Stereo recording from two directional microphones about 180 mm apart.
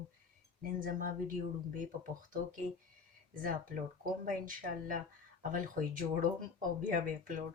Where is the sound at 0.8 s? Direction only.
50° right (ahead or behind).